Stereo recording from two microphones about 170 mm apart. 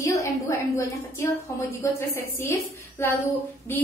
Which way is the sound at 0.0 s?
15° left (ahead or behind).